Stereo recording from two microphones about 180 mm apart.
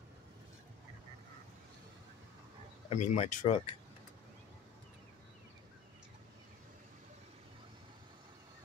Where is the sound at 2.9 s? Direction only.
40° left (ahead or behind).